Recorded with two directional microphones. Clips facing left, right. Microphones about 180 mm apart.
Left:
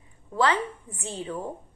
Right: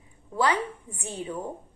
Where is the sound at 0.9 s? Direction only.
10° right (ahead or behind).